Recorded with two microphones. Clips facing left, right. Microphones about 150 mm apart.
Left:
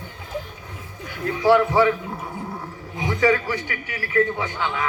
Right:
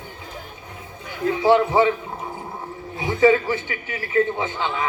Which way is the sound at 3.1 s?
20° right (ahead or behind).